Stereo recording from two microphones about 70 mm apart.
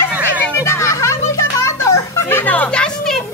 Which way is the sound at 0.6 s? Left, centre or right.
Left.